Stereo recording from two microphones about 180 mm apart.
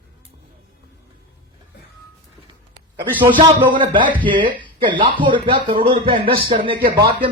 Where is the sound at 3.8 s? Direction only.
25° right (ahead or behind).